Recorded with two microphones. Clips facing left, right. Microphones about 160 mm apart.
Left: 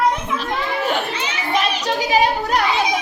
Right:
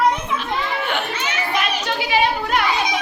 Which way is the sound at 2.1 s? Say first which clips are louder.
Left 1 dB; 40° left (ahead or behind).